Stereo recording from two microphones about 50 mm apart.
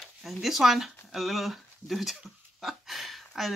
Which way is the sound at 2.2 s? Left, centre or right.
Centre.